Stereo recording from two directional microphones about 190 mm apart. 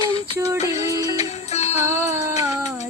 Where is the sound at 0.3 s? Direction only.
15° right (ahead or behind).